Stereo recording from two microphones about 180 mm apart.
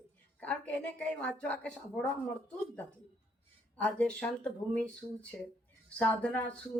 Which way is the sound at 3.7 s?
5° left (ahead or behind).